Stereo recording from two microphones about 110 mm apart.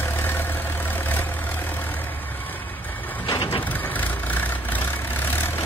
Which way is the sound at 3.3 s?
50° left (ahead or behind).